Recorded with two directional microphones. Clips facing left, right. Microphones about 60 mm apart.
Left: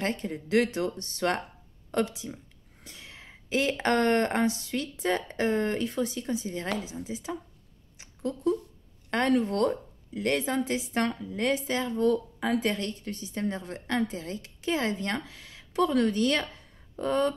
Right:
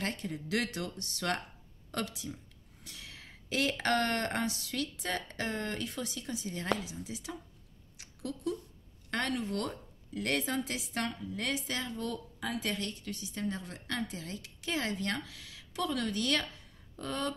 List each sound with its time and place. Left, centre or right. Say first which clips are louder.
0.0 s speech: left 6 dB; left
8.0 s a sound: left 8 dB; left
9.1 s speech: left 8 dB; left